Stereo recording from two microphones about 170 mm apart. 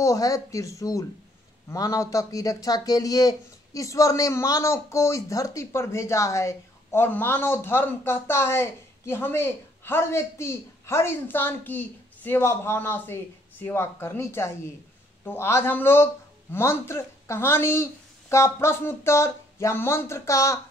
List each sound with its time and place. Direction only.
0.0 s speech: 20° left (ahead or behind)